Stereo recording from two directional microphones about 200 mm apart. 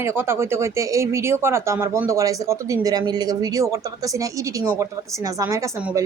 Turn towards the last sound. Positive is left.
turn(degrees=-15)  # may be behind; listen again after turning